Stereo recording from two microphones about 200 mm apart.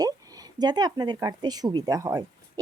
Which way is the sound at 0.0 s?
20° right (ahead or behind).